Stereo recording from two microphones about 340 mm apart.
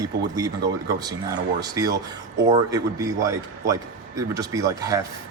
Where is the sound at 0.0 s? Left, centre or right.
Centre.